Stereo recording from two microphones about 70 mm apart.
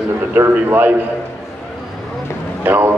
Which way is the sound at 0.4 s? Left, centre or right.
Right.